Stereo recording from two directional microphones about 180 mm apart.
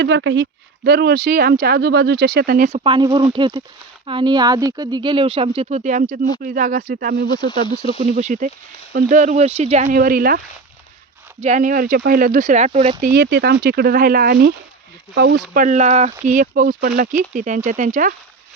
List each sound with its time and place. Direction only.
0.0 s speech: 80° right
0.9 s speech: 60° right (ahead or behind)
2.6 s speech: 35° right (ahead or behind); by 7.3 s 55° right (ahead or behind)
7.3 s speech: 25° left (ahead or behind)
7.9 s speech: 40° right (ahead or behind)
8.9 s speech: 60° right (ahead or behind)
9.1 s speech: 40° right (ahead or behind)
11.3 s speech: 40° right (ahead or behind)
13.0 s speech: 55° right (ahead or behind)